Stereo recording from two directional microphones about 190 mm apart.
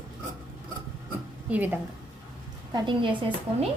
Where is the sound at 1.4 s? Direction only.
10° right (ahead or behind).